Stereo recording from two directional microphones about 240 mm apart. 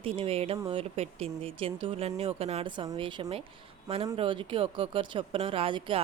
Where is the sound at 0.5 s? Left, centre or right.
Centre.